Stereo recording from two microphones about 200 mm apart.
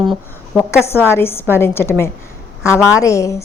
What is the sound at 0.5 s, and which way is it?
A woman's voice, 10° left (ahead or behind).